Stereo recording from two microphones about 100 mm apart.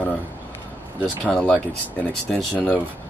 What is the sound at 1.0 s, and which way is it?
Speech, 10° left (ahead or behind).